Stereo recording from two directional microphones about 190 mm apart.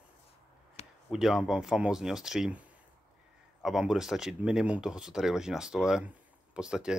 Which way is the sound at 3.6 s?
Centre (ahead or behind).